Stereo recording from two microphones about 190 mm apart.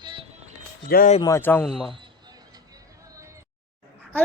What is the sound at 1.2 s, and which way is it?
Speech, 15° left (ahead or behind).